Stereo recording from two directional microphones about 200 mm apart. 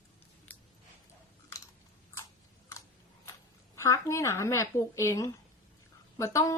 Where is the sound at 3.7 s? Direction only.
15° left (ahead or behind).